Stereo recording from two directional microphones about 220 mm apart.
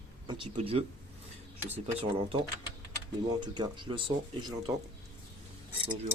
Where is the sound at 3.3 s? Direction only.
20° right (ahead or behind).